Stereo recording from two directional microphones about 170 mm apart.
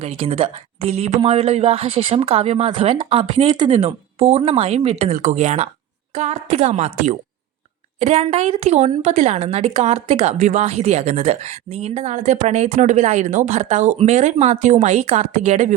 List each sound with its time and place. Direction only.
0.0 s a woman's voice: 35° right (ahead or behind)